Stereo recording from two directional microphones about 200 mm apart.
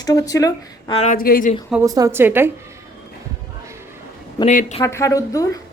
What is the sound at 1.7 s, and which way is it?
Speech, 15° right (ahead or behind).